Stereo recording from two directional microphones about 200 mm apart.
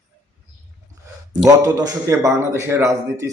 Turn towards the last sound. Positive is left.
turn(degrees=-15)  # may be behind; listen again after turning